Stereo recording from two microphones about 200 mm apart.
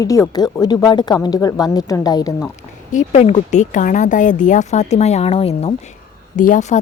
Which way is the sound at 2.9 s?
35° left (ahead or behind).